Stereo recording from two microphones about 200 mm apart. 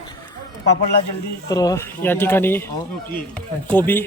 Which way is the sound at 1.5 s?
20° left (ahead or behind).